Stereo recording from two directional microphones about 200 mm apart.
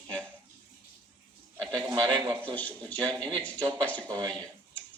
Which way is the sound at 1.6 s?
20° right (ahead or behind).